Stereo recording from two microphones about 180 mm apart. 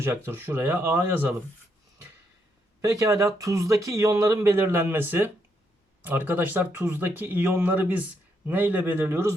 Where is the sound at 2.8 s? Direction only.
15° right (ahead or behind).